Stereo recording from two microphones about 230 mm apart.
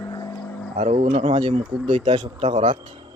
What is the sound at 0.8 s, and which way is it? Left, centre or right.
Speech, right.